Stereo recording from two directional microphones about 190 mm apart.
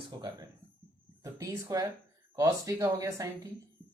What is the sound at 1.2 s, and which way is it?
Speech, 15° right (ahead or behind).